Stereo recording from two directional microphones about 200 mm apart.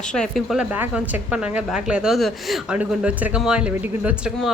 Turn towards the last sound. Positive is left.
turn(degrees=-5)  # may be behind; listen again after turning